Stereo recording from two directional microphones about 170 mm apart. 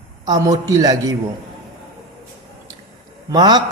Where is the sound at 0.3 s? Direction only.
20° right (ahead or behind).